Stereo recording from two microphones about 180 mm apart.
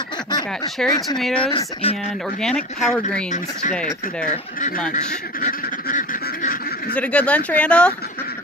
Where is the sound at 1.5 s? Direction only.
30° left (ahead or behind).